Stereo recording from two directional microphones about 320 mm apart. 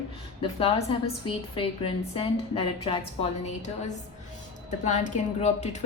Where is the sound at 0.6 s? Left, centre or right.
Centre.